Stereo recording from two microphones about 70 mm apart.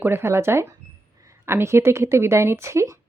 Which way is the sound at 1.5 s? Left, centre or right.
Right.